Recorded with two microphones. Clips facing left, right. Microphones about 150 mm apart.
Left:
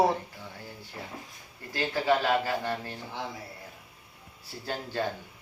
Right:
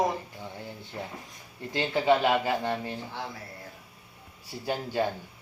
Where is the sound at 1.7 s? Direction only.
20° right (ahead or behind).